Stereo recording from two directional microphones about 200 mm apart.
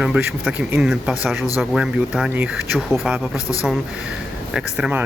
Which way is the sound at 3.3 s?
15° left (ahead or behind).